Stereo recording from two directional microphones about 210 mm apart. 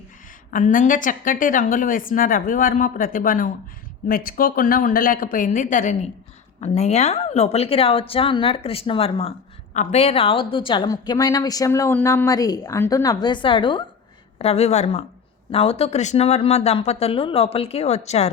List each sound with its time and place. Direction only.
0.5 s a woman's voice: 40° left (ahead or behind)